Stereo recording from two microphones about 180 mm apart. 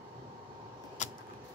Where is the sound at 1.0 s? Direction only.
45° left (ahead or behind).